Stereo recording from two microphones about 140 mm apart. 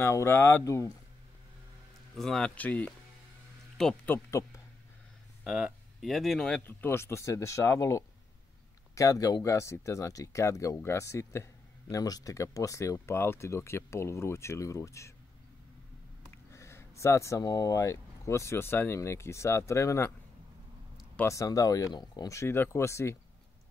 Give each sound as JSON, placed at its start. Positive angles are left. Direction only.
{"t": 0.0, "sound": "speech", "side_deg": 20}
{"t": 2.1, "sound": "speech", "side_deg": 5}
{"t": 5.4, "sound": "speech", "side_deg": -5}
{"t": 16.3, "sound": "speech", "side_deg": 20}
{"t": 21.2, "sound": "speech", "side_deg": 20}